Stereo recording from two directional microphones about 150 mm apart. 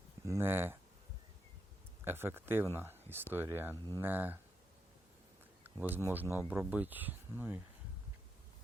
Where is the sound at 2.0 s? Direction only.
15° right (ahead or behind).